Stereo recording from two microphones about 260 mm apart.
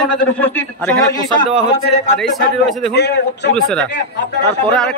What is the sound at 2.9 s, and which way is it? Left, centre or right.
Speech, left.